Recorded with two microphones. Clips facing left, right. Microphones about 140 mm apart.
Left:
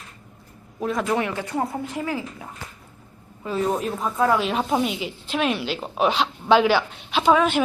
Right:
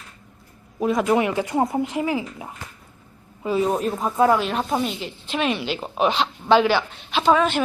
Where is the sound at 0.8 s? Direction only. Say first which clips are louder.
Right 4 dB; 10° right (ahead or behind).